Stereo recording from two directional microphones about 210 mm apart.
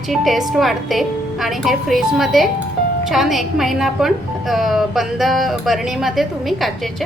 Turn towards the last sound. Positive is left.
turn(degrees=0)  # may be behind; listen again after turning